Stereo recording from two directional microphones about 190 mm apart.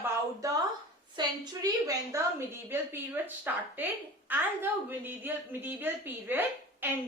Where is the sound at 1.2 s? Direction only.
25° right (ahead or behind).